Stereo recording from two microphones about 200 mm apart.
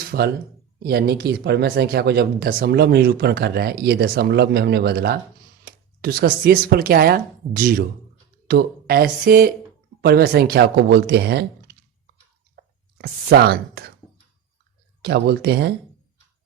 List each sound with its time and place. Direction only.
0.0 s a sound: 50° right (ahead or behind)
0.8 s speech: 55° right (ahead or behind)
12.5 s whispering: 55° right (ahead or behind)
15.0 s speech: 55° right (ahead or behind)